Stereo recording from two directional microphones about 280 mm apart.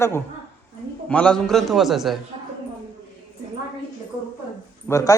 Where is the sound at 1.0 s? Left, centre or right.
Centre.